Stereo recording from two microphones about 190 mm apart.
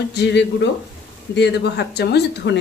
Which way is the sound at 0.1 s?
65° left (ahead or behind).